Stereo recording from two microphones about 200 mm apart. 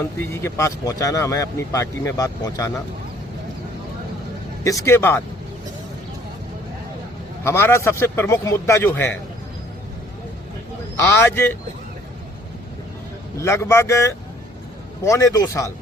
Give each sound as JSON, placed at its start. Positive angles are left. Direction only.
{"t": 0.0, "sound": "speech", "side_deg": 10}
{"t": 4.6, "sound": "speech", "side_deg": 15}
{"t": 7.4, "sound": "speech", "side_deg": 10}
{"t": 10.9, "sound": "speech", "side_deg": 10}
{"t": 13.4, "sound": "speech", "side_deg": 15}